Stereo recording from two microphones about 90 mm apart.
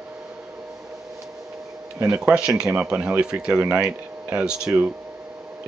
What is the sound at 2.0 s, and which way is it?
Speech, 10° right (ahead or behind).